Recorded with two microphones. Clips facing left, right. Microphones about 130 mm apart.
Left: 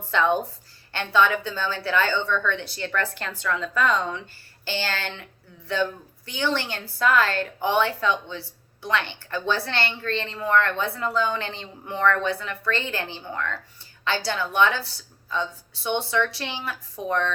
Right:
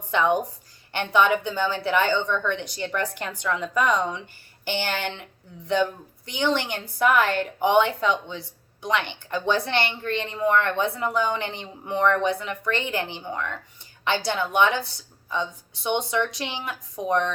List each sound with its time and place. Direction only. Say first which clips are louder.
0.1 s a woman's voice: even; 15° right (ahead or behind)